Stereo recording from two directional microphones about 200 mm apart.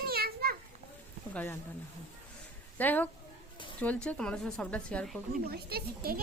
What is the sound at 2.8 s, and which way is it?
Speech, 10° left (ahead or behind).